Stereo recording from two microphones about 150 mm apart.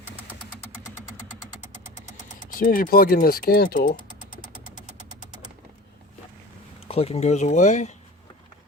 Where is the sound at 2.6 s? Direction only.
70° left (ahead or behind).